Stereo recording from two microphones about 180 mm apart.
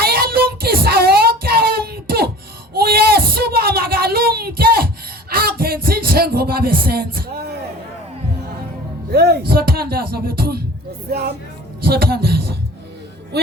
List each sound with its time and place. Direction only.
0.0 s child singing: 60° right (ahead or behind)
2.7 s a sound: 60° right (ahead or behind)
5.3 s speech: 55° right (ahead or behind)
9.1 s speech: 65° right (ahead or behind)